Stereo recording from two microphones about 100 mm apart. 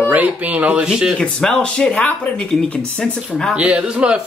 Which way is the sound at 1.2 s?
10° left (ahead or behind).